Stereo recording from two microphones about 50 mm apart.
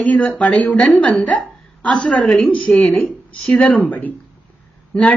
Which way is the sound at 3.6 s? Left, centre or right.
Left.